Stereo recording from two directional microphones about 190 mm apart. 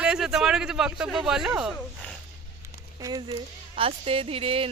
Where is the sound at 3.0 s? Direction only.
20° right (ahead or behind).